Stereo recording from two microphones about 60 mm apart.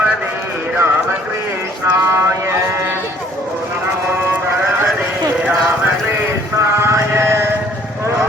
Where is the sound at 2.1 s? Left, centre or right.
Right.